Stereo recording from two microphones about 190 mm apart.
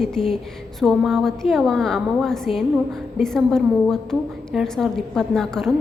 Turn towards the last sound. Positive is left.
turn(degrees=0)  # may be behind; listen again after turning